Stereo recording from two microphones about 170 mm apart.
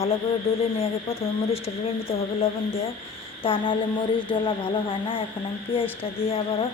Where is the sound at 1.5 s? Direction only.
35° left (ahead or behind).